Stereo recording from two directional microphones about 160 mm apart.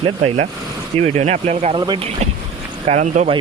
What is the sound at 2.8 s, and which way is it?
Speech, 45° right (ahead or behind).